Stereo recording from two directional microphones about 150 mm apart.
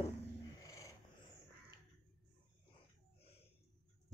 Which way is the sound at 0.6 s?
20° left (ahead or behind).